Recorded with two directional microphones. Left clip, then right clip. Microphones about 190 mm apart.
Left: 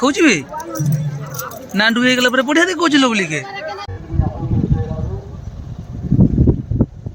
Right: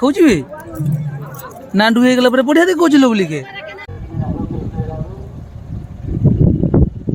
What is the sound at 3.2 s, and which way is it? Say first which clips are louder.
Speech: even; 15° right (ahead or behind).